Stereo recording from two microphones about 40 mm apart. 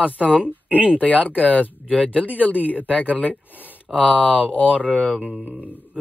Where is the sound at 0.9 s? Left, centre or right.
Left.